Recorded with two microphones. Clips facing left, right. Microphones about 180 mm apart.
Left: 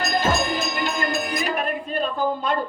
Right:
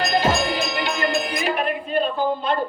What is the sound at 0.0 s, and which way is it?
Music, 45° left (ahead or behind).